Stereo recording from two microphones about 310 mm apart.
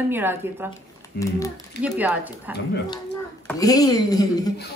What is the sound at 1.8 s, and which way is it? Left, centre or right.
Speech, centre.